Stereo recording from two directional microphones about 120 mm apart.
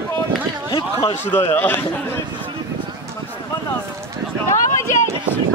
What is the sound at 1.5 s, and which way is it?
Speech, 15° left (ahead or behind).